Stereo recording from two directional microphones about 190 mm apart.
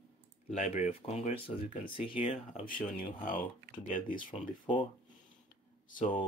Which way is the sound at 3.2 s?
45° left (ahead or behind).